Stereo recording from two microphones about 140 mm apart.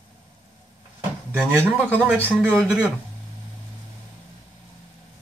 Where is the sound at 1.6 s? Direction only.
10° right (ahead or behind).